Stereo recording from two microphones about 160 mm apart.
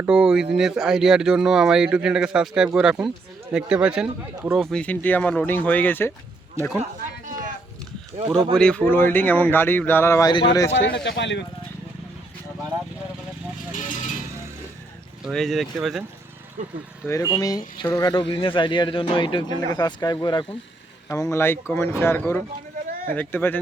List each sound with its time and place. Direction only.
0.0 s speech: 5° right (ahead or behind); by 6.1 s 15° left (ahead or behind)
6.6 s speech: 15° right (ahead or behind)
8.5 s speech: 5° left (ahead or behind); by 10.7 s 25° left (ahead or behind)
10.7 s speech: 90° left
15.2 s speech: centre (ahead or behind)
17.1 s speech: 20° left (ahead or behind)
21.1 s speech: 20° left (ahead or behind)